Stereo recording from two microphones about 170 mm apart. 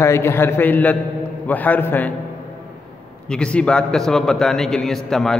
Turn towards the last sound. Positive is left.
turn(degrees=0)  # may be behind; listen again after turning